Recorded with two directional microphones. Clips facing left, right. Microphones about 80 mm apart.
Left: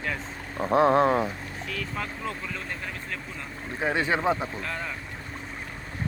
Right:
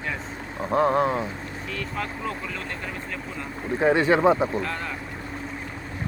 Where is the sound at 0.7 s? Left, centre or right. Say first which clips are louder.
Left 1 dB; left.